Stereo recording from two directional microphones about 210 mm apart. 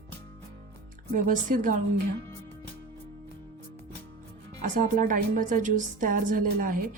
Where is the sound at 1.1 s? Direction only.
40° right (ahead or behind).